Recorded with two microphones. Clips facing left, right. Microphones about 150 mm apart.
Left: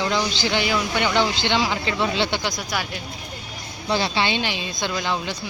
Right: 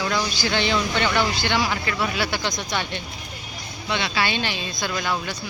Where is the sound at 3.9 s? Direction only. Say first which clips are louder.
Left 4 dB; 35° left (ahead or behind).